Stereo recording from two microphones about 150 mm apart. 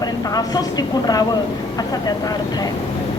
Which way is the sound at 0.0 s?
25° left (ahead or behind).